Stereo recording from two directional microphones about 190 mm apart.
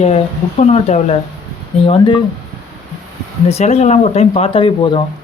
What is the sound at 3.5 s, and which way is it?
Speech, 35° left (ahead or behind).